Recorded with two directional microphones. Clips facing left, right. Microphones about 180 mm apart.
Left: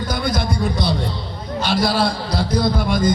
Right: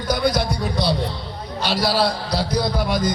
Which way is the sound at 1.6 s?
50° left (ahead or behind).